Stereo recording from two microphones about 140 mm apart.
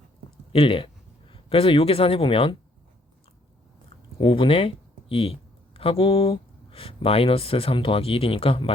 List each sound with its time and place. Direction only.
0.5 s speech: 40° left (ahead or behind)
3.8 s speech: 40° left (ahead or behind)